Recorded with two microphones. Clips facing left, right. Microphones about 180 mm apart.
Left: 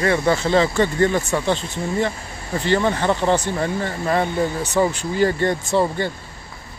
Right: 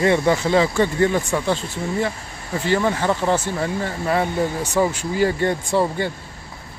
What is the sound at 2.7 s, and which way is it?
Speech, 5° right (ahead or behind).